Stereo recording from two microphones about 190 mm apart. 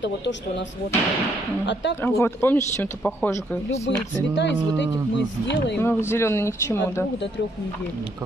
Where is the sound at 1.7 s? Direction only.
70° left (ahead or behind).